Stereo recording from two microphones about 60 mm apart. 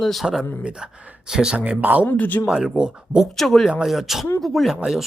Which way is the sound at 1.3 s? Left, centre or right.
Centre.